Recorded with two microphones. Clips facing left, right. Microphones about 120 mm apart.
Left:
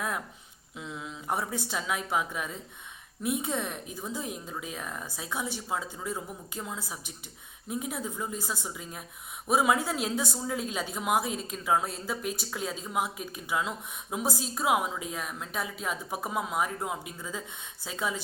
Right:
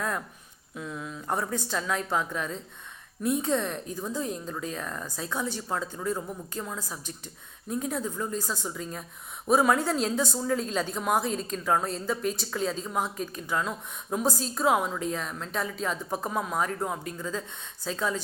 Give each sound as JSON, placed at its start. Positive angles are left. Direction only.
{"t": 0.8, "sound": "a woman's voice", "side_deg": 20}